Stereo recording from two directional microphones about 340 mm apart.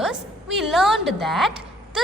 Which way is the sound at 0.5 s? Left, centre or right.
Centre.